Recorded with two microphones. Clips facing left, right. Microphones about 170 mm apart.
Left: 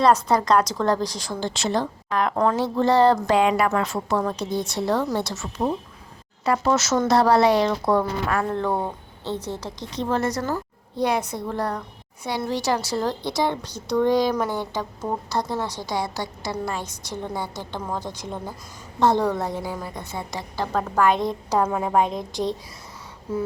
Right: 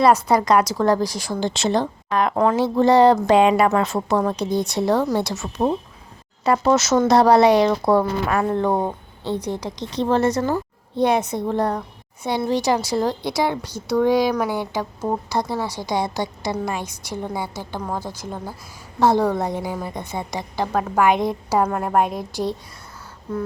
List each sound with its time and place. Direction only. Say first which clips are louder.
0.0 s a woman's voice: right 2 dB; 10° right (ahead or behind)
9.9 s a woman's voice: right 5 dB; 30° right (ahead or behind); by 21.6 s 10° right (ahead or behind)
21.6 s a woman's voice: right 1 dB; centre (ahead or behind)